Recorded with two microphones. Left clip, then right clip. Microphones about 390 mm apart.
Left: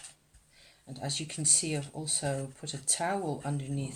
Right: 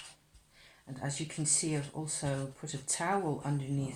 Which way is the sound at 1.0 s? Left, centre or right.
Left.